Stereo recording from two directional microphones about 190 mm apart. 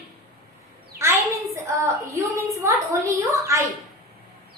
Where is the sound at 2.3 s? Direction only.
15° right (ahead or behind).